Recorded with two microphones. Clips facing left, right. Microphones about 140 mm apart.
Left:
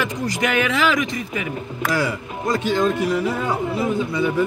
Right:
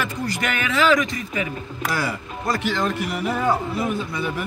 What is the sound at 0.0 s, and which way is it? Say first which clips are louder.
Speech: left 3 dB; 15° left (ahead or behind).